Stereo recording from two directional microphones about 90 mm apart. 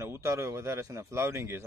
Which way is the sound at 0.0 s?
30° right (ahead or behind).